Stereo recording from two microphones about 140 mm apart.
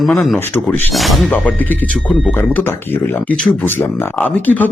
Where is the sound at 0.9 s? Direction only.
Centre (ahead or behind).